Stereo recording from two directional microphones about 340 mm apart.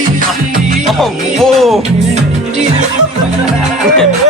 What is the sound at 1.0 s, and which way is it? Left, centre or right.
Music, centre.